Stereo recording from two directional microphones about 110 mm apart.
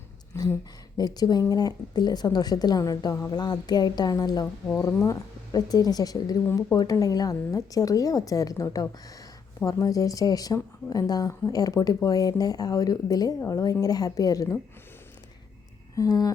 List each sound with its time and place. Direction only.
0.3 s speech: 20° left (ahead or behind)
0.9 s speech: 35° left (ahead or behind)
16.0 s speech: 35° left (ahead or behind)